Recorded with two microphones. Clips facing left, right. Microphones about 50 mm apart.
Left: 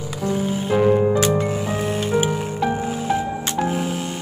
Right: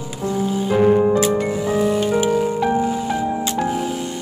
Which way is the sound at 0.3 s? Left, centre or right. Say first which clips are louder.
Right 2 dB; left.